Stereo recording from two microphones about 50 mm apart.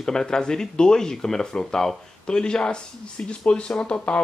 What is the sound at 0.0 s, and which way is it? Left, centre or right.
Speech, centre.